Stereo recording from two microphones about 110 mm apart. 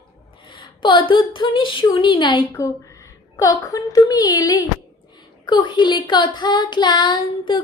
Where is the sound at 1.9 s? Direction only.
45° left (ahead or behind).